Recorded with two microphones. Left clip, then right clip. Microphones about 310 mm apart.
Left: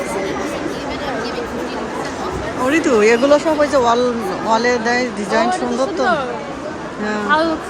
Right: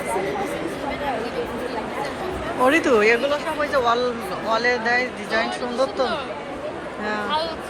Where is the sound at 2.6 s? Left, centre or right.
Centre.